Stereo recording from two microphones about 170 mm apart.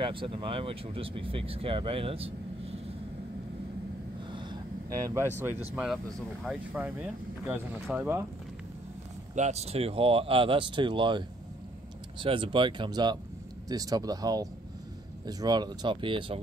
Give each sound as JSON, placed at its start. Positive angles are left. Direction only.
{"t": 0.0, "sound": "speech", "side_deg": -30}
{"t": 4.3, "sound": "vehicle", "side_deg": -25}
{"t": 6.4, "sound": "speech", "side_deg": -5}
{"t": 9.3, "sound": "speech", "side_deg": -40}